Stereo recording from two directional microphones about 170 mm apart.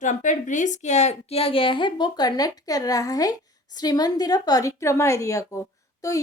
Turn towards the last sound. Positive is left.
turn(degrees=20)  # may be behind; listen again after turning